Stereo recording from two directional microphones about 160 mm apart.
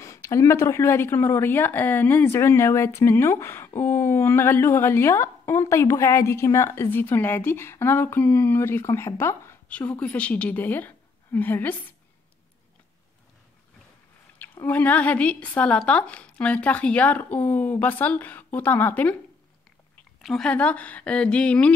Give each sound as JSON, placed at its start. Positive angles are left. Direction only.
{"t": 0.0, "sound": "speech", "side_deg": 20}
{"t": 14.6, "sound": "speech", "side_deg": 10}
{"t": 20.2, "sound": "speech", "side_deg": 0}